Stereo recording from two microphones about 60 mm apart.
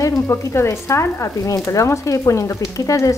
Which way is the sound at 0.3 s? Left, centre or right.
Left.